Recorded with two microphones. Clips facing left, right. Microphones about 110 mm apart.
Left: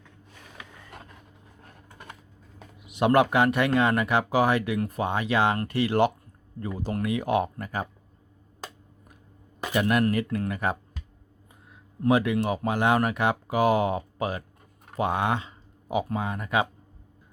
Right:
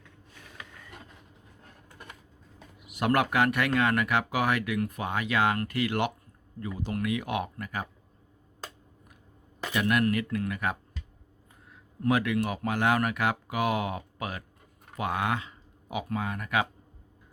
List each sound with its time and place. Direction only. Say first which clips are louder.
2.8 s speech: left 5 dB; 25° left (ahead or behind)
9.7 s speech: left 3 dB; 35° left (ahead or behind)
12.0 s speech: left 4 dB; 25° left (ahead or behind)